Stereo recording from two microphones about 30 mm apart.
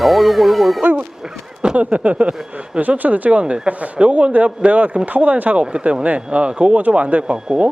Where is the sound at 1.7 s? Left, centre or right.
Right.